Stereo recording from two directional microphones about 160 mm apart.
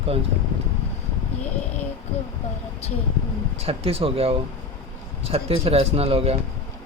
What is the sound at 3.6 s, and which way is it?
Speech, 40° right (ahead or behind).